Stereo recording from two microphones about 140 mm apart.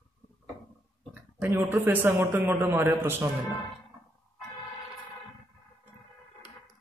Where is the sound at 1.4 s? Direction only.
15° right (ahead or behind).